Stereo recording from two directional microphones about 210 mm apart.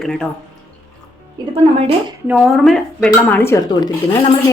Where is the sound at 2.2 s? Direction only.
5° right (ahead or behind).